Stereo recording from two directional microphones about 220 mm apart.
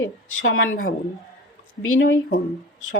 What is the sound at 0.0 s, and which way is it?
Speech, 65° left (ahead or behind).